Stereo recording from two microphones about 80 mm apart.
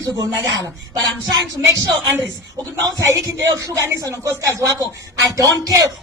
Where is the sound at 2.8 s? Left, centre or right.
Right.